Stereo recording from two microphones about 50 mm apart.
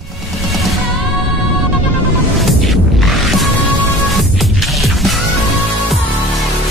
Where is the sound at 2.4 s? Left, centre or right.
Centre.